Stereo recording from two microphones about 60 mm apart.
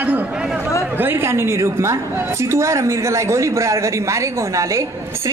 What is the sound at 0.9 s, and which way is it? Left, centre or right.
A woman's voice, right.